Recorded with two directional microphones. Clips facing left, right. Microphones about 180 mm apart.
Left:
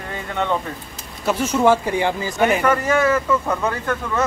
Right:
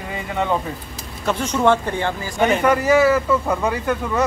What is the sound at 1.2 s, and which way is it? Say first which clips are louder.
Speech: left 1 dB; 5° left (ahead or behind).